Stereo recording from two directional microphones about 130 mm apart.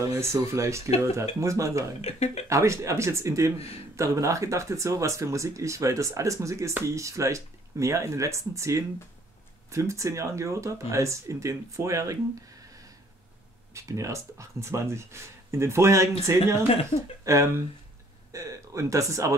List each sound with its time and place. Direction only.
0.0 s speech: 25° right (ahead or behind)
2.0 s speech: 55° left (ahead or behind)
2.5 s speech: 20° right (ahead or behind)
3.5 s speech: 50° left (ahead or behind)
3.9 s speech: 25° right (ahead or behind)
13.7 s speech: 25° right (ahead or behind)